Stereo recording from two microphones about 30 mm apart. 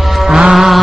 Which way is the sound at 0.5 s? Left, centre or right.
Centre.